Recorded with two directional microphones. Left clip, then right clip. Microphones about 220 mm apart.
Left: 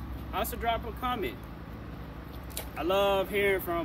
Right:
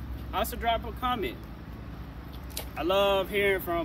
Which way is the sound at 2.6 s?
Centre (ahead or behind).